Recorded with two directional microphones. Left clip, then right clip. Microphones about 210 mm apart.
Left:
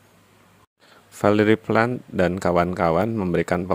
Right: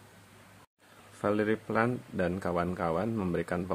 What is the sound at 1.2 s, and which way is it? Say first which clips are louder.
Speech: left 11 dB; 40° left (ahead or behind).